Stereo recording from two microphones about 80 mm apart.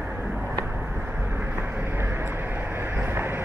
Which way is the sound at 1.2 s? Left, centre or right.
Right.